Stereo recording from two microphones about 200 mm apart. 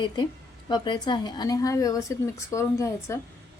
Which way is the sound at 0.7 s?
20° left (ahead or behind).